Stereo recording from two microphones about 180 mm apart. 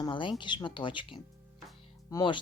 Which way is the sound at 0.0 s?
25° left (ahead or behind).